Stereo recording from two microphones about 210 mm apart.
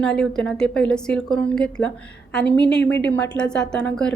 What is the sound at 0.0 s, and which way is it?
A woman's voice, centre (ahead or behind).